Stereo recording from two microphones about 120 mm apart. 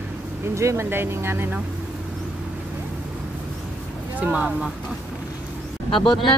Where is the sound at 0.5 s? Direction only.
25° right (ahead or behind).